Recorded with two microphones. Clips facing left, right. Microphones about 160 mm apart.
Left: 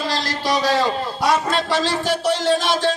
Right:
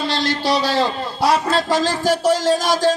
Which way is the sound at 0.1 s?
25° right (ahead or behind).